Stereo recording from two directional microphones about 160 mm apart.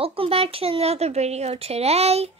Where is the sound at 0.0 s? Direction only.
35° right (ahead or behind).